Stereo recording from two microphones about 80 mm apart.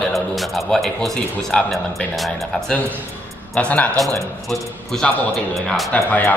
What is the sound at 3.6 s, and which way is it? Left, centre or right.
Speech, centre.